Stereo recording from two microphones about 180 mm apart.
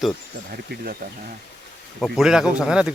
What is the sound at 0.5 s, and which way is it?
Speech, 55° right (ahead or behind).